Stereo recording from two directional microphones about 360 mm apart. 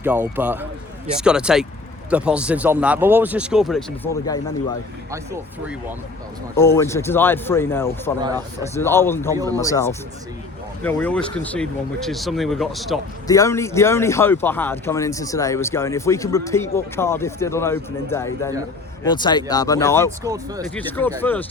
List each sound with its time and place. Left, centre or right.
0.0 s speech: centre
6.6 s speech: centre
9.3 s speech: centre
9.6 s speech: centre
20.2 s speech: centre
20.7 s speech: centre